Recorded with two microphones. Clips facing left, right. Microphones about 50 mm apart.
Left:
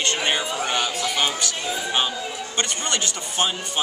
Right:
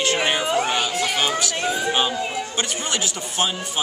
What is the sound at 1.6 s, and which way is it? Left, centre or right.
Speech, right.